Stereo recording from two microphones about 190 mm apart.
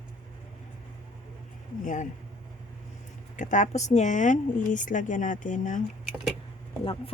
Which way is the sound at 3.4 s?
40° left (ahead or behind).